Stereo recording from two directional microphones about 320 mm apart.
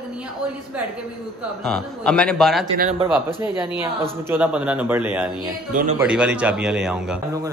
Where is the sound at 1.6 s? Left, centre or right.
Centre.